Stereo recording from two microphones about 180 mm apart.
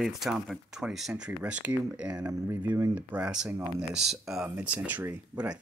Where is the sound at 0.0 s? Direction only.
Centre (ahead or behind).